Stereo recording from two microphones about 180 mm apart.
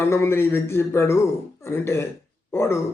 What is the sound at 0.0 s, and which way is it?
A man's voice, 15° left (ahead or behind).